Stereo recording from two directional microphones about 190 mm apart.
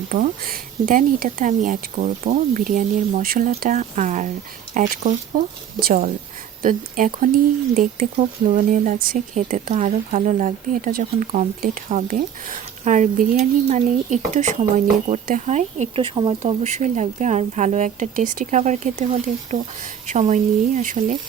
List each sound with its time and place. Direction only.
0.1 s speech: 45° right (ahead or behind)